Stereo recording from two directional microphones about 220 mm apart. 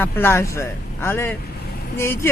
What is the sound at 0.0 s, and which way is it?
Speech, 10° left (ahead or behind).